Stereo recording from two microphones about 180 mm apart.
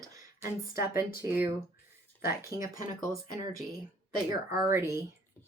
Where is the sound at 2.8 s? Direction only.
20° right (ahead or behind).